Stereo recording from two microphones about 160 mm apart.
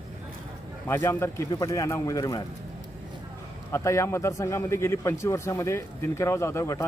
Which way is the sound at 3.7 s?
20° left (ahead or behind).